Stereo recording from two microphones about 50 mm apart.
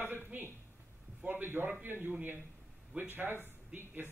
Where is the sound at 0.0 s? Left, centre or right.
Right.